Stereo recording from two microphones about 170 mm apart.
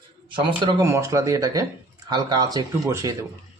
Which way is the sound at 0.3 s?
25° right (ahead or behind).